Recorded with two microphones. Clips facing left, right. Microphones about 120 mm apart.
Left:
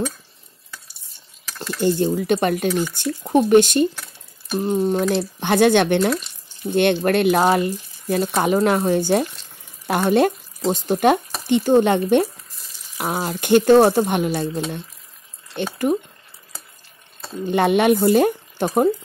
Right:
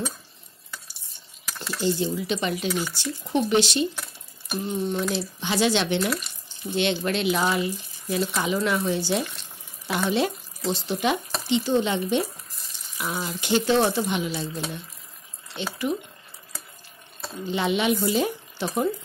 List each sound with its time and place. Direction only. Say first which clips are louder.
1.8 s speech: left 6 dB; 50° left (ahead or behind)
5.1 s speech: left 7 dB; 55° left (ahead or behind)
15.5 s speech: left 7 dB; 50° left (ahead or behind)
17.5 s speech: left 7 dB; 55° left (ahead or behind)